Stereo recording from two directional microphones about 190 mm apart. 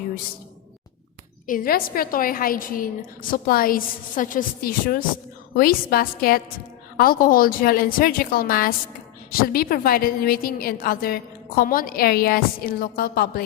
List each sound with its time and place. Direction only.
1.5 s a woman's voice: 50° left (ahead or behind)